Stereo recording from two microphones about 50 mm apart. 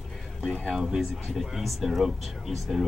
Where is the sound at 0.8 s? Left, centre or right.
Centre.